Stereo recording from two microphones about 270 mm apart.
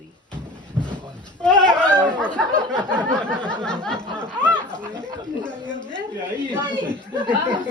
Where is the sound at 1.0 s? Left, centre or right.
Centre.